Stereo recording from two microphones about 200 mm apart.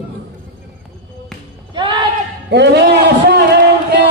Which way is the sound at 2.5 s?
60° right (ahead or behind).